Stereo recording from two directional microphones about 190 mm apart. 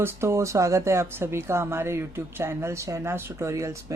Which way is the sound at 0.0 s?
15° right (ahead or behind).